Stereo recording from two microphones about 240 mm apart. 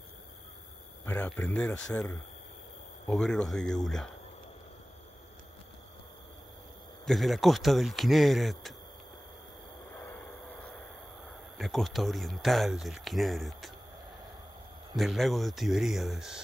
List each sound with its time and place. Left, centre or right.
1.0 s speech: centre
3.2 s speech: centre
7.1 s speech: centre
11.5 s speech: centre
15.0 s speech: centre